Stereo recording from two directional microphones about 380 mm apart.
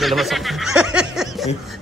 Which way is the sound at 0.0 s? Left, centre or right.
Centre.